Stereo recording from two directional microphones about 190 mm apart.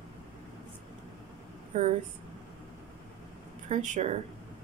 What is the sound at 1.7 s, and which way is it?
Speech, 40° right (ahead or behind).